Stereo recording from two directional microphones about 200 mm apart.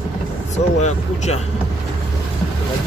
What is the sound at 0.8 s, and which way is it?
Speech, 35° left (ahead or behind).